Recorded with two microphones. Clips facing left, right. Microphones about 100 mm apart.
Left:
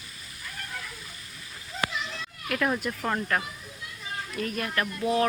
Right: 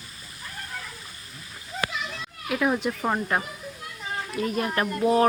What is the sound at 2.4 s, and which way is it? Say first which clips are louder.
Speech: right 3 dB; 10° right (ahead or behind).